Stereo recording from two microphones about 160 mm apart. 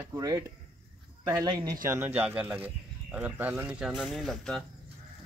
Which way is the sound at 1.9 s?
15° right (ahead or behind).